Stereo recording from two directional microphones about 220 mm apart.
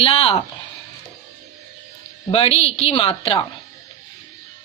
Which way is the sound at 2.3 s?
25° left (ahead or behind).